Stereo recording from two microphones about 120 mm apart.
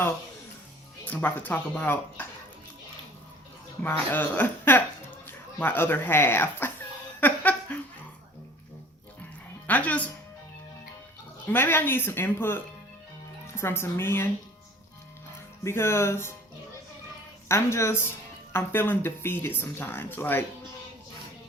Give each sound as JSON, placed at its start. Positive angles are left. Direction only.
{"t": 1.0, "sound": "speech", "side_deg": 15}
{"t": 3.8, "sound": "speech", "side_deg": 15}
{"t": 7.2, "sound": "laughter", "side_deg": 15}
{"t": 9.6, "sound": "speech", "side_deg": 15}
{"t": 11.4, "sound": "a woman's voice", "side_deg": 15}
{"t": 15.6, "sound": "a woman's voice", "side_deg": 20}
{"t": 17.5, "sound": "a woman's voice", "side_deg": 20}